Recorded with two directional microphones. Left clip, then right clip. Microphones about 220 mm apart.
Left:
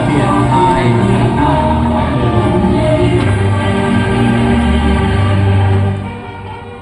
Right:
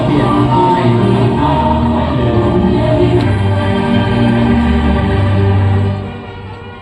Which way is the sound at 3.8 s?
30° left (ahead or behind).